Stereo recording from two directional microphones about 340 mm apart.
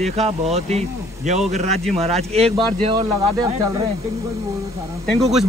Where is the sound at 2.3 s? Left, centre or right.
Centre.